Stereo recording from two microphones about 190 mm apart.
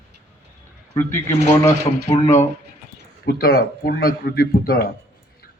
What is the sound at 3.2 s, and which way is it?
Speech, 55° left (ahead or behind).